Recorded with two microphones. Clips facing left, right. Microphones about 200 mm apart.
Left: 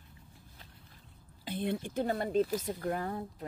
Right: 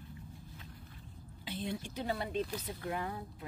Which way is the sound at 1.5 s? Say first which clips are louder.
Left 5 dB; 55° left (ahead or behind).